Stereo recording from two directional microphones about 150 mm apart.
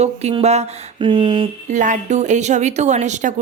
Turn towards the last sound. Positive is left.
turn(degrees=-50)  # may be behind; listen again after turning